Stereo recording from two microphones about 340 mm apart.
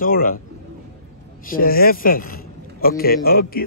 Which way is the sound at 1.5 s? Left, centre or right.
Left.